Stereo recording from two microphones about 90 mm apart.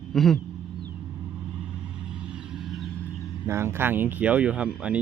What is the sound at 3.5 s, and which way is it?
Speech, 30° right (ahead or behind).